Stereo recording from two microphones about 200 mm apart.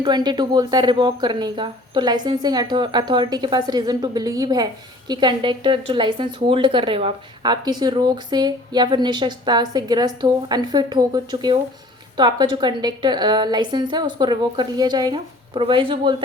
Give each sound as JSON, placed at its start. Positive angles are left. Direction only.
{"t": 0.0, "sound": "speech", "side_deg": -20}